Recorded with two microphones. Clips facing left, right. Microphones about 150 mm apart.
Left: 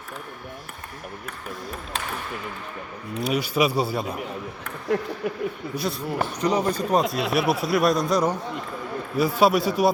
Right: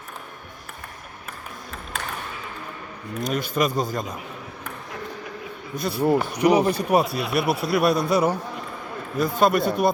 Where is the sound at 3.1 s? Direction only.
10° left (ahead or behind).